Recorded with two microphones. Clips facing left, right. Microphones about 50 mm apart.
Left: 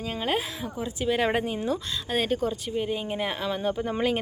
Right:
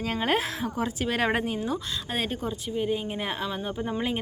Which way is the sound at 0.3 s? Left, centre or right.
Right.